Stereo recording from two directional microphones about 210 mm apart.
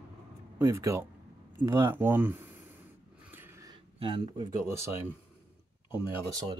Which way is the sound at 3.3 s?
10° right (ahead or behind).